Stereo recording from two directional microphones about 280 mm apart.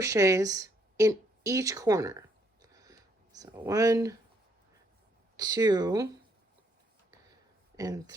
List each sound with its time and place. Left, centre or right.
0.0 s a sound: centre
5.4 s speech: centre
7.8 s speech: centre